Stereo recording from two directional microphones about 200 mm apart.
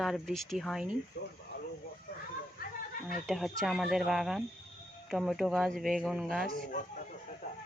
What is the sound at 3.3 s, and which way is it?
Speech, centre (ahead or behind).